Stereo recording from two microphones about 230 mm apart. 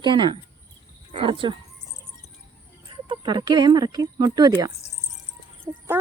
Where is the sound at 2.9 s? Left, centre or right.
Right.